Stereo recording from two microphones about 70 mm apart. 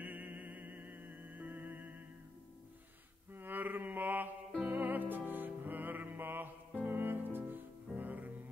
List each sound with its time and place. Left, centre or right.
0.0 s music: right
3.3 s mantra: right
4.6 s music: right